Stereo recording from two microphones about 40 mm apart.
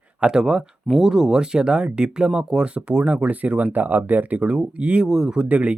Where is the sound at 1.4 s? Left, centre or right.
Right.